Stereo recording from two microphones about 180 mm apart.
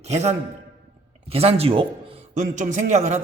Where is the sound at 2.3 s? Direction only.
45° right (ahead or behind).